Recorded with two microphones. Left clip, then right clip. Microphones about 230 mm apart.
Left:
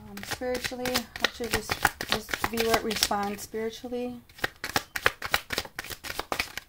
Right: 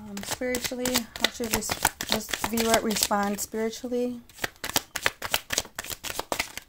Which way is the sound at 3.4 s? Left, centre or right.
Right.